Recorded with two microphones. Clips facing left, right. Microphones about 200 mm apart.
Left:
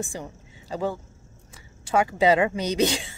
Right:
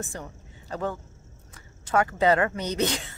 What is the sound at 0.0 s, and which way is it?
Speech, 10° left (ahead or behind).